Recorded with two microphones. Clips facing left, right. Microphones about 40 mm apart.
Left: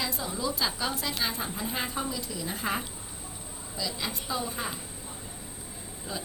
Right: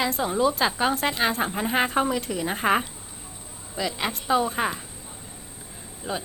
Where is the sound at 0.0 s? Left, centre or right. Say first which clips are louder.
Right 9 dB; right.